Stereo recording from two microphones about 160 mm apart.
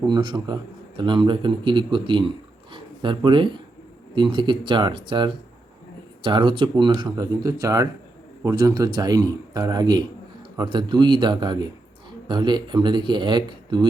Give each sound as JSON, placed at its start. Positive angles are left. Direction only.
{"t": 0.1, "sound": "speech", "side_deg": -25}